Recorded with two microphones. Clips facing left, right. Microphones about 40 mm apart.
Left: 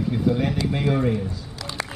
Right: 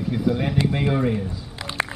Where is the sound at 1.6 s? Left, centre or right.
Right.